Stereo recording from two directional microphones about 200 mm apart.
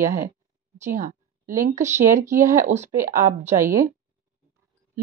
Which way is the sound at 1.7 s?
35° right (ahead or behind).